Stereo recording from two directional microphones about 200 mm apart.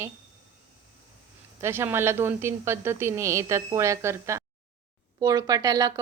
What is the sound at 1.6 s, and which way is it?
A woman's voice, 10° right (ahead or behind).